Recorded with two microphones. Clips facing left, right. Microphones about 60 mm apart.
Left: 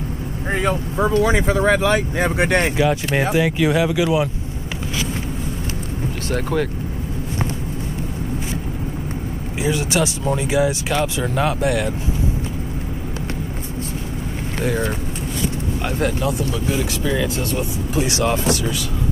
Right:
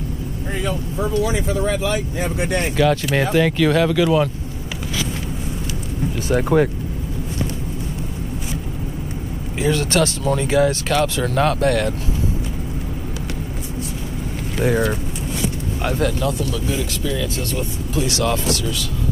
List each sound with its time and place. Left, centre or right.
0.5 s speech: left
3.2 s speech: centre
6.2 s speech: centre
9.6 s speech: centre
15.8 s speech: centre
16.6 s speech: left